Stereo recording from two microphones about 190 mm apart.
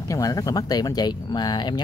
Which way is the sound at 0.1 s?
20° left (ahead or behind).